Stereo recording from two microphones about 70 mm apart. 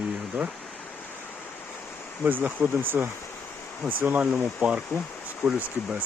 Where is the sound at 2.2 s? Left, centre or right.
Right.